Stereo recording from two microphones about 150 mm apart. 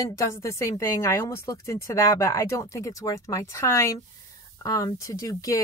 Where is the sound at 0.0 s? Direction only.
20° left (ahead or behind).